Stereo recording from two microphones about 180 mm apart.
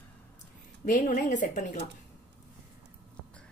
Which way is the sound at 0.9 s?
45° left (ahead or behind).